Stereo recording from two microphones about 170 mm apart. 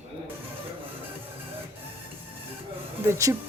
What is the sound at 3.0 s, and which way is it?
Speech, 15° right (ahead or behind).